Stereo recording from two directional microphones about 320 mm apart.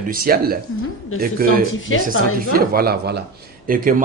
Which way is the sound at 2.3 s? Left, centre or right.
Right.